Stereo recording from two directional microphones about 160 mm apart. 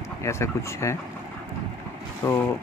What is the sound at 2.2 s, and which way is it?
Speech, 15° left (ahead or behind).